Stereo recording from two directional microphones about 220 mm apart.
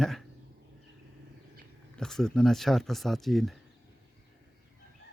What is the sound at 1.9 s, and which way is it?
Speech, centre (ahead or behind).